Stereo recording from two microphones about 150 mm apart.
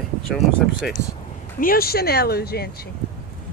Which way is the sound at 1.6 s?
80° left.